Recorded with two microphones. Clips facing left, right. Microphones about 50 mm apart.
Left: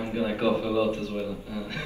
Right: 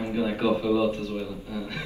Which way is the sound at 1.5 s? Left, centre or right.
Right.